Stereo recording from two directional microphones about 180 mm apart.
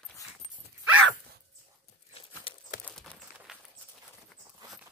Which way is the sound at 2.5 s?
30° left (ahead or behind).